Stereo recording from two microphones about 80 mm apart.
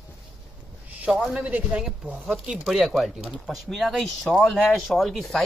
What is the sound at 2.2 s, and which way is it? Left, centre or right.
Speech, centre.